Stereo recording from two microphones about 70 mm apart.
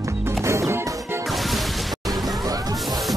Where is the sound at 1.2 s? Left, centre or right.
Centre.